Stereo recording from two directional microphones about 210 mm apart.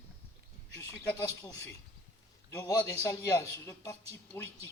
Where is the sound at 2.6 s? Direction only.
15° left (ahead or behind).